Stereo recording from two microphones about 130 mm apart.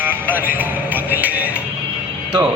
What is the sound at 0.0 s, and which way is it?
Music, 15° right (ahead or behind).